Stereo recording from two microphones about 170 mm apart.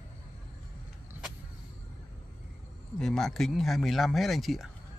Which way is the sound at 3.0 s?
5° left (ahead or behind).